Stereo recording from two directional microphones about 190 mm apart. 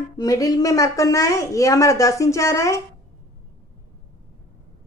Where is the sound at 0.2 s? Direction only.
20° left (ahead or behind).